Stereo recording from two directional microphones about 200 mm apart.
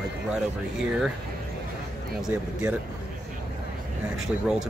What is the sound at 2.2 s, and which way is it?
Speech, 5° right (ahead or behind).